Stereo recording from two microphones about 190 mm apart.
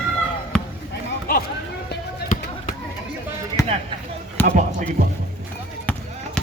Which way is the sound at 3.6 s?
15° left (ahead or behind).